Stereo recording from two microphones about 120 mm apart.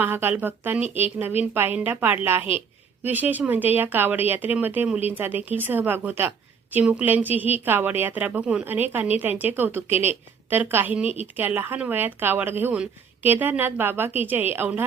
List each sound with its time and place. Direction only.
0.0 s speech: 15° right (ahead or behind)